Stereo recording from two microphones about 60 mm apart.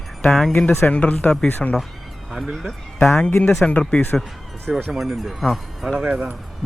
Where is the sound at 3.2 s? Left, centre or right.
Left.